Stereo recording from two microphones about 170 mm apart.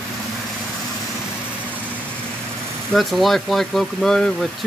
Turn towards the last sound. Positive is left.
turn(degrees=5)  # may be behind; listen again after turning